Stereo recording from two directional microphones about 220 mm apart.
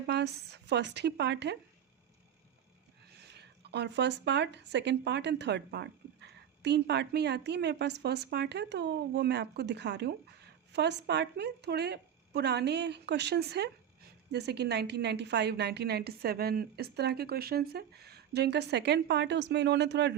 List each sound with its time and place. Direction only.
0.1 s speech: 50° right (ahead or behind)
3.2 s speech: 50° right (ahead or behind)